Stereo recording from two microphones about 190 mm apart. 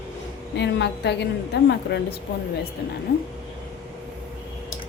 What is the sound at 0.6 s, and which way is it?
A woman's voice, 65° left (ahead or behind).